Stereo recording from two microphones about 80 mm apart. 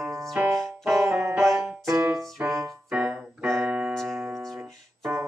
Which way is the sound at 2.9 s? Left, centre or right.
Centre.